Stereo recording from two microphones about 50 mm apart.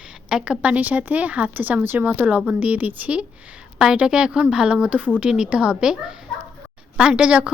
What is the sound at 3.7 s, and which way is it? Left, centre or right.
A woman's voice, centre.